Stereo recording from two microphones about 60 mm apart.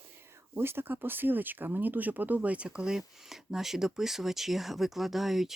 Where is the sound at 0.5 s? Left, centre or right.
Right.